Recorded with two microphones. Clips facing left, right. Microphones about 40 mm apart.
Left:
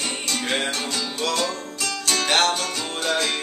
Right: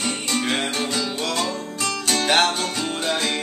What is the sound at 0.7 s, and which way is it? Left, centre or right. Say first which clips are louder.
Music: right 3 dB; centre.